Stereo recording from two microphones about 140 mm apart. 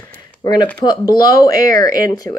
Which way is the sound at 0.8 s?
30° left (ahead or behind).